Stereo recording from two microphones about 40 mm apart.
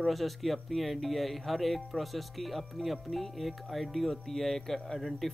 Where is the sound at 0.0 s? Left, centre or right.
Centre.